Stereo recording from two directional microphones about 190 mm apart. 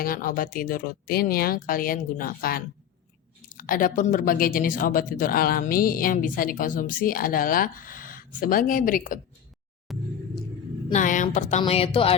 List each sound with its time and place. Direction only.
0.0 s speech: 50° left (ahead or behind)
9.9 s rumble: centre (ahead or behind)
10.9 s a woman's voice: 40° left (ahead or behind)